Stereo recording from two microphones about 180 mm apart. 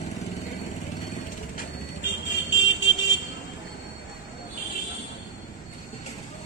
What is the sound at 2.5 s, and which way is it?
Vehicle, 90° left.